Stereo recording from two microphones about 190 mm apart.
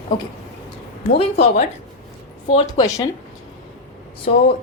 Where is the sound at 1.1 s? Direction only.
35° left (ahead or behind).